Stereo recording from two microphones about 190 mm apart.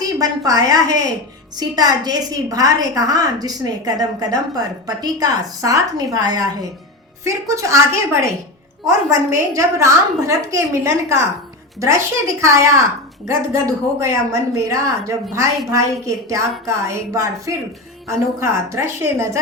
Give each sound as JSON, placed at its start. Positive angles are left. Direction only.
{"t": 0.0, "sound": "a woman's voice", "side_deg": -20}